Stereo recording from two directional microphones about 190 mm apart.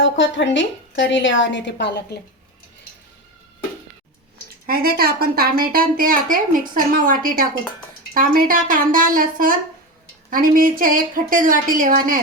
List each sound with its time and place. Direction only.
0.0 s a woman's voice: 70° left (ahead or behind)
4.6 s a woman's voice: 50° right (ahead or behind)